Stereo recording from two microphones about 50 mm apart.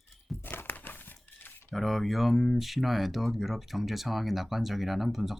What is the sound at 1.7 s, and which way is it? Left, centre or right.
Speech, centre.